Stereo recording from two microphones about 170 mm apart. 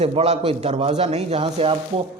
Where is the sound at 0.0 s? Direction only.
35° right (ahead or behind).